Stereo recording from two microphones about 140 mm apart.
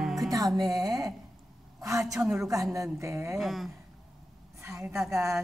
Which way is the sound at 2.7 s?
20° right (ahead or behind).